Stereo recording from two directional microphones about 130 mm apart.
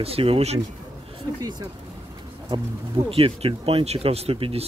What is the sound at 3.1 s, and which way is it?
Speech, 45° right (ahead or behind).